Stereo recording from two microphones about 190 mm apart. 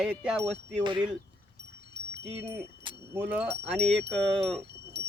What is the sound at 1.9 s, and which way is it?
Wind chime, 65° right (ahead or behind).